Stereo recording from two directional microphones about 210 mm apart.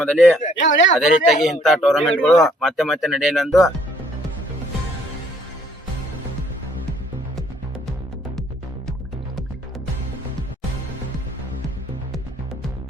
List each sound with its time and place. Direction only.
0.2 s speech: centre (ahead or behind)
0.6 s speech: 60° left (ahead or behind)
0.9 s speech: centre (ahead or behind)